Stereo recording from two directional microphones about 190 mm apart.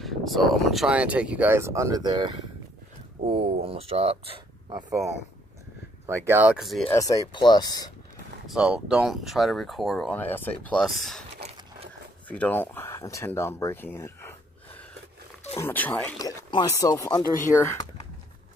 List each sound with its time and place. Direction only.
0.0 s speech: centre (ahead or behind); by 4.8 s 25° right (ahead or behind)
6.0 s speech: 10° right (ahead or behind)
6.9 s speech: 20° left (ahead or behind)
8.5 s speech: 5° right (ahead or behind)
12.3 s speech: 10° left (ahead or behind)
15.6 s speech: 10° left (ahead or behind)
16.2 s speech: 20° left (ahead or behind)